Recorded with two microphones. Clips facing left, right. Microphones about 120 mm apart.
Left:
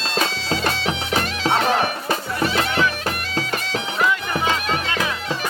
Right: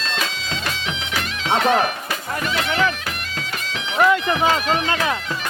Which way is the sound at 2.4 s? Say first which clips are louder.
Even; 35° left (ahead or behind).